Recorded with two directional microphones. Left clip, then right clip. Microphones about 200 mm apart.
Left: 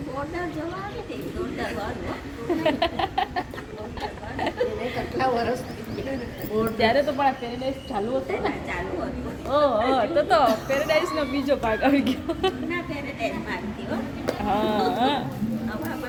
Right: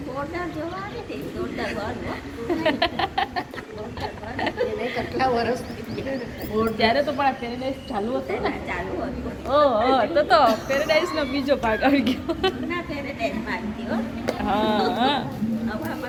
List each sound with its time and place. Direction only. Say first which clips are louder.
2.6 s a sound: right 1 dB; 15° left (ahead or behind)
5.1 s speech: right 1 dB; centre (ahead or behind)
6.7 s a woman's voice: even; 25° left (ahead or behind)
7.9 s speech: even; 10° right (ahead or behind)
13.2 s speech: right 2 dB; 15° right (ahead or behind)
14.4 s speech: right 1 dB; 10° left (ahead or behind)